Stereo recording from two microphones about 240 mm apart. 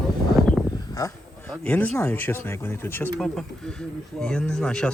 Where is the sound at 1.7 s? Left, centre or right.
Centre.